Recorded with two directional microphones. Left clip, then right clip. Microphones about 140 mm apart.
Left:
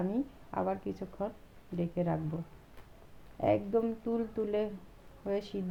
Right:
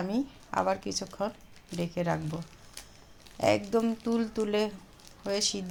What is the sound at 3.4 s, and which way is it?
Speech, 30° right (ahead or behind).